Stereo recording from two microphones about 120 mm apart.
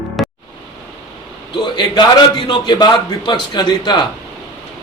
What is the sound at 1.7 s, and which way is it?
A man's voice, 40° left (ahead or behind).